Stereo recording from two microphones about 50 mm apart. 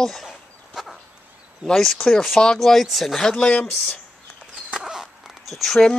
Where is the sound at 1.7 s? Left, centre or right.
Centre.